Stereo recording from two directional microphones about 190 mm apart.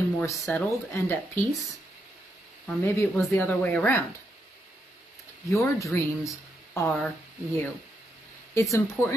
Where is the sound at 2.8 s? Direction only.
10° left (ahead or behind).